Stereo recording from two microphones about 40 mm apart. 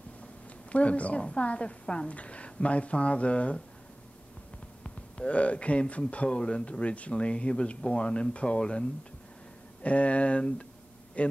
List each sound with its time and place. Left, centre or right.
0.7 s a woman's voice: left
4.8 s speech: left
9.8 s a woman's voice: left